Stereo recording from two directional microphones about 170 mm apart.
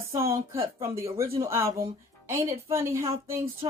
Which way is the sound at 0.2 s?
15° right (ahead or behind).